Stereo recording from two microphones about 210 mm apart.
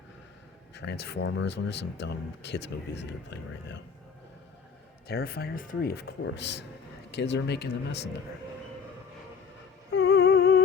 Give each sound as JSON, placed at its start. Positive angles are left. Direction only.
{"t": 0.7, "sound": "speech", "side_deg": 50}
{"t": 5.0, "sound": "speech", "side_deg": 45}
{"t": 9.9, "sound": "humming", "side_deg": 55}